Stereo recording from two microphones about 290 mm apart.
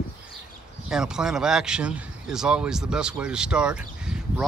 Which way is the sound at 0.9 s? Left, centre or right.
Centre.